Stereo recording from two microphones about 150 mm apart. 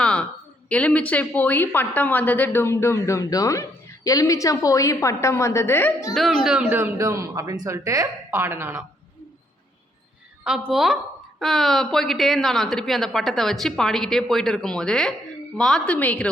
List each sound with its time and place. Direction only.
0.0 s a sound: 5° left (ahead or behind)
0.7 s a woman's voice: 10° left (ahead or behind)
6.1 s speech: centre (ahead or behind); by 8.8 s 15° right (ahead or behind)
10.4 s a woman's voice: 5° right (ahead or behind)